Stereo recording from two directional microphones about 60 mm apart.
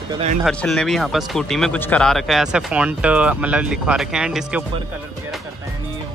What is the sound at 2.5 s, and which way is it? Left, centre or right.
Speech, centre.